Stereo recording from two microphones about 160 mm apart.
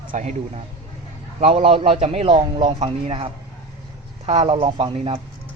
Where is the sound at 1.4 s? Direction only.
40° right (ahead or behind).